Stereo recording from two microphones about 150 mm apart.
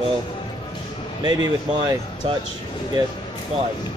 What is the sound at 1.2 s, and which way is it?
Speech, 25° right (ahead or behind).